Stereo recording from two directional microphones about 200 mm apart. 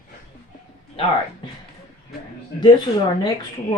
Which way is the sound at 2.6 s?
20° left (ahead or behind).